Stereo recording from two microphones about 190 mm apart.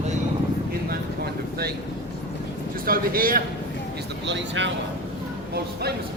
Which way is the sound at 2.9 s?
50° right (ahead or behind).